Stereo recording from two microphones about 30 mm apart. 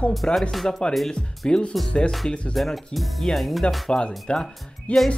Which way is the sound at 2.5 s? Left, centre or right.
Centre.